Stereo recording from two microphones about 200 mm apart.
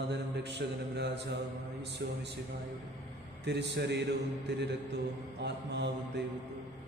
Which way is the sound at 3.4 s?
55° right (ahead or behind).